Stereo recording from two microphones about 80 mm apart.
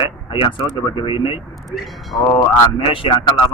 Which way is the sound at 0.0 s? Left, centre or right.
Left.